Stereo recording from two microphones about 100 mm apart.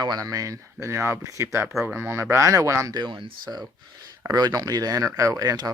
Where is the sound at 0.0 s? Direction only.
40° right (ahead or behind).